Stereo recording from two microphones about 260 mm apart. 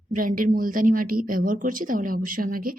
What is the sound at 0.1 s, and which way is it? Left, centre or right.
A woman's voice, right.